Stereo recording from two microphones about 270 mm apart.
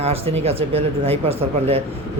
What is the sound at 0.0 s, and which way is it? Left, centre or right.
Speech, right.